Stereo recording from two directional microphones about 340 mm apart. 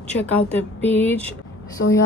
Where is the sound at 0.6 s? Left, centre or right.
Centre.